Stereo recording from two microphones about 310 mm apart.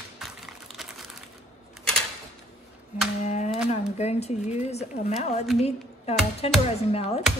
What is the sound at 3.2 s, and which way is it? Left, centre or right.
Speech, left.